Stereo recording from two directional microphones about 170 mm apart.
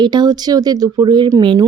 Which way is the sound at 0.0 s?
25° right (ahead or behind).